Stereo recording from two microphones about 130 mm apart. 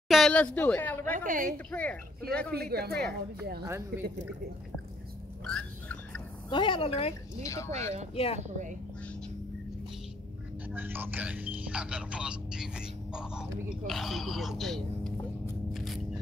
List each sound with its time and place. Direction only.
0.1 s speech: 5° left (ahead or behind)
1.1 s a woman's voice: 90° right
1.7 s speech: 10° left (ahead or behind)
3.6 s speech: 20° right (ahead or behind)
5.4 s a sound: 5° left (ahead or behind)
6.5 s a woman's voice: 40° left (ahead or behind)
7.4 s speech: 20° left (ahead or behind)
8.1 s a woman's voice: 50° left (ahead or behind)
8.4 s speech: 70° right (ahead or behind)
10.7 s speech: 15° right (ahead or behind); by 15.1 s centre (ahead or behind)
15.7 s a sound: centre (ahead or behind)